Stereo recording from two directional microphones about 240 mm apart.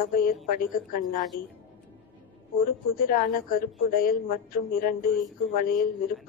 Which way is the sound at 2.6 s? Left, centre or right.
Left.